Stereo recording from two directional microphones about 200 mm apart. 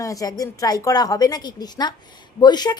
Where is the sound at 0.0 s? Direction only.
15° left (ahead or behind).